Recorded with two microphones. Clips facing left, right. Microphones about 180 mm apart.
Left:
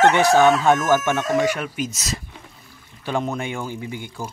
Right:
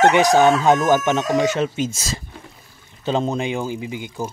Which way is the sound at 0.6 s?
20° right (ahead or behind).